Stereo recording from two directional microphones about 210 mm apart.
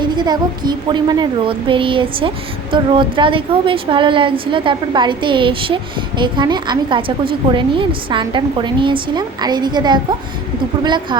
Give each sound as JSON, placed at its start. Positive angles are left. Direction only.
{"t": 0.0, "sound": "a woman's voice", "side_deg": -20}